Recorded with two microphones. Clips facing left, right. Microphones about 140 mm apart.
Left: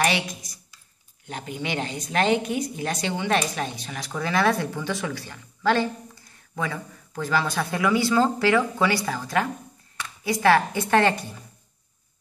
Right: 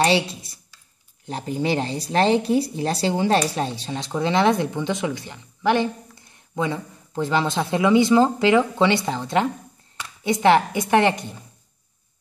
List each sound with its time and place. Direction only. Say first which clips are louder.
0.0 s a woman's voice: right 5 dB; 30° right (ahead or behind)